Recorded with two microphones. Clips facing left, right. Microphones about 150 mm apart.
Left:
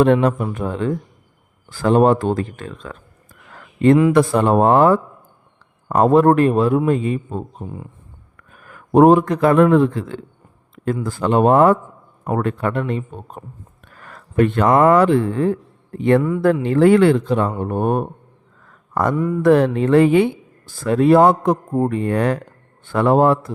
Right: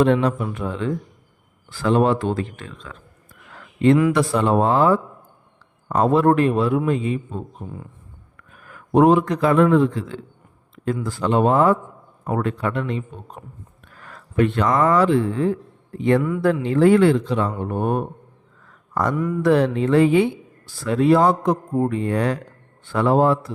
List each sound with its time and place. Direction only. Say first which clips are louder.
0.0 s a man's voice: left 3 dB; 55° left (ahead or behind)
3.5 s a sound: left 3 dB; 45° left (ahead or behind)
4.1 s a man's voice: left 4 dB; 50° left (ahead or behind)
13.8 s a sound: left 3 dB; 50° left (ahead or behind)
14.8 s a man's voice: left 4 dB; 60° left (ahead or behind)
19.1 s mantra: left 3 dB; 30° left (ahead or behind)
19.4 s speech: left 4 dB; 50° left (ahead or behind)